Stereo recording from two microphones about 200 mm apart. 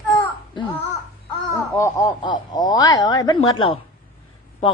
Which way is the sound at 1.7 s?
15° left (ahead or behind).